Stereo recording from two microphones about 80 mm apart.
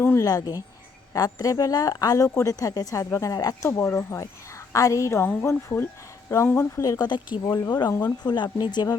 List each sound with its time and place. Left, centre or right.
0.2 s a woman's voice: left
3.3 s a woman's voice: left
3.7 s speech: left
4.7 s speech: left
5.2 s speech: left
6.8 s a woman's voice: left
7.1 s speech: left
7.4 s speech: left
7.9 s speech: left